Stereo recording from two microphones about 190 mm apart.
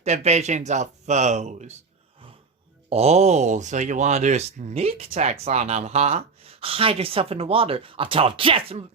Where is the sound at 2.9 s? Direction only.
35° right (ahead or behind).